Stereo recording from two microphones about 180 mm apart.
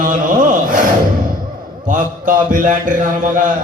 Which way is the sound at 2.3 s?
45° right (ahead or behind).